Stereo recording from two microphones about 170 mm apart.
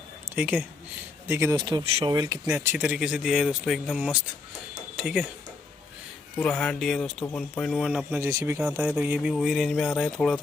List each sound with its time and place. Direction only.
0.3 s speech: 10° right (ahead or behind); by 2.1 s 30° right (ahead or behind)
2.1 s speech: 20° right (ahead or behind)
2.6 s speech: 10° right (ahead or behind)
6.4 s speech: 10° left (ahead or behind)
8.3 s speech: 20° right (ahead or behind)
8.5 s speech: 5° right (ahead or behind)